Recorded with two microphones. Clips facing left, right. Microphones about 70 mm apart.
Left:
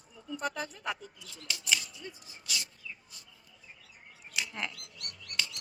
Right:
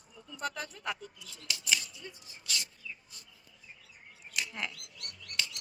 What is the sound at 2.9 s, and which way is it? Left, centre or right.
Bird, centre.